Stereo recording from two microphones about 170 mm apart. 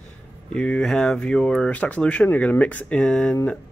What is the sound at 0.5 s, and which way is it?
Speech, 5° left (ahead or behind).